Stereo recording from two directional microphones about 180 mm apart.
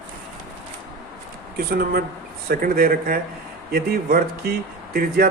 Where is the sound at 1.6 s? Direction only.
60° right (ahead or behind).